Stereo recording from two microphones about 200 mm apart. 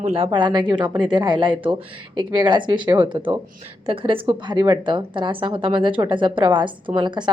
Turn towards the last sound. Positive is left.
turn(degrees=-20)  # may be behind; listen again after turning